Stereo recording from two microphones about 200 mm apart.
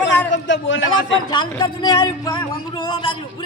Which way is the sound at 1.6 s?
20° left (ahead or behind).